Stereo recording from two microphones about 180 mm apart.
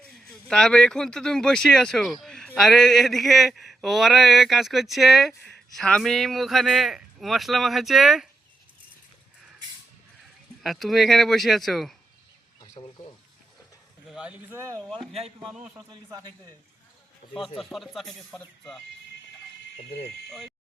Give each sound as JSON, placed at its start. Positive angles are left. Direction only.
{"t": 0.3, "sound": "mantra", "side_deg": 5}
{"t": 2.2, "sound": "a sound", "side_deg": 5}
{"t": 2.6, "sound": "mantra", "side_deg": 0}
{"t": 10.6, "sound": "mantra", "side_deg": 0}
{"t": 12.5, "sound": "a sound", "side_deg": 20}
{"t": 14.1, "sound": "speech", "side_deg": -5}
{"t": 15.4, "sound": "a man's voice", "side_deg": -40}
{"t": 15.7, "sound": "speech", "side_deg": -15}
{"t": 17.6, "sound": "mantra", "side_deg": 0}